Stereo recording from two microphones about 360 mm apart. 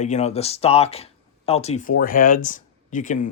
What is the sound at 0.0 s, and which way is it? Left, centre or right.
Speech, centre.